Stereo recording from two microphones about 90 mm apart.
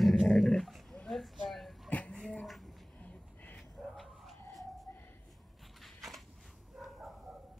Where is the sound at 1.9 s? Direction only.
15° left (ahead or behind).